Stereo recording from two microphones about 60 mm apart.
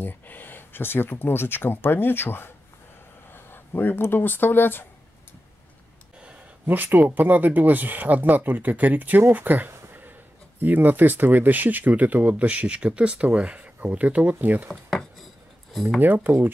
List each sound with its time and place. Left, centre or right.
0.0 s speech: left
6.2 s speech: right
14.9 s a sound: centre
15.7 s speech: centre
16.0 s speech: right